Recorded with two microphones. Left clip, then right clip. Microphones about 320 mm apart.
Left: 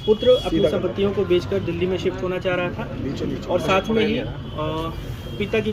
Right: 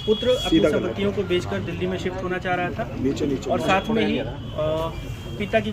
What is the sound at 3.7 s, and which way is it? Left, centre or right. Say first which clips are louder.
Speech: left 2 dB; right.